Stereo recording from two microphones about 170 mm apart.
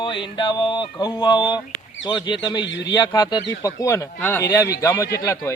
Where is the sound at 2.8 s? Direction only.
25° left (ahead or behind).